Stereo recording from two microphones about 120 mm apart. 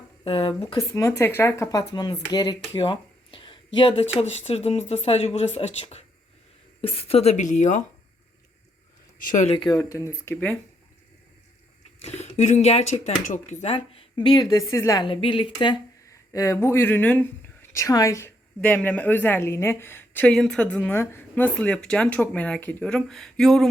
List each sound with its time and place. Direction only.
0.3 s speech: 50° left (ahead or behind)
0.8 s speech: 25° left (ahead or behind)
1.9 s speech: 35° left (ahead or behind)
2.7 s a sound: 45° left (ahead or behind)
4.2 s speech: 60° left (ahead or behind); by 7.9 s 85° left
9.3 s speech: 80° left
9.6 s speech: 30° left (ahead or behind)
12.0 s speech: 65° left (ahead or behind); by 13.7 s 90° left
13.7 s speech: 50° left (ahead or behind)
14.6 s speech: 25° left (ahead or behind)
15.0 s speech: 45° left (ahead or behind)
16.3 s speech: 25° left (ahead or behind)
17.7 s a woman's voice: 25° left (ahead or behind)
20.3 s a woman's voice: 5° left (ahead or behind)